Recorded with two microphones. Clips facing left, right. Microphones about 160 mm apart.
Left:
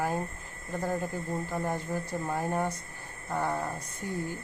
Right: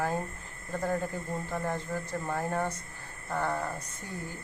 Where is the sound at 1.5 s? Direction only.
15° left (ahead or behind).